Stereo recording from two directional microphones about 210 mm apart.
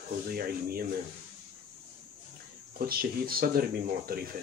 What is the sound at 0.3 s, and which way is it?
Speech, 45° right (ahead or behind).